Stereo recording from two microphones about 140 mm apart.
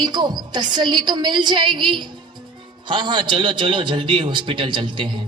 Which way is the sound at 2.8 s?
35° right (ahead or behind).